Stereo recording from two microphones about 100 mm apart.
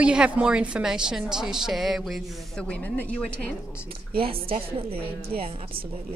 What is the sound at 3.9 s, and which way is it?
A woman's voice, 65° right (ahead or behind).